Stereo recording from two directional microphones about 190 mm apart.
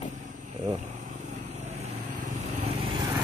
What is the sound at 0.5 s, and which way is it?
Vehicle, 40° right (ahead or behind).